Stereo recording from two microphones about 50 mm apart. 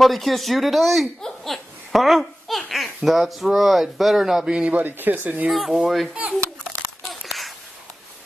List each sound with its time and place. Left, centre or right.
0.0 s a child's voice: centre
4.5 s speech: centre
4.7 s speech: right
5.5 s speech: centre
7.1 s a sound: centre